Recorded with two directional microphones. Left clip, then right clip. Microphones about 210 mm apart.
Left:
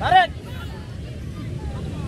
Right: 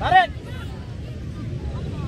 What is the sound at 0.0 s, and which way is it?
Vehicle, 30° left (ahead or behind).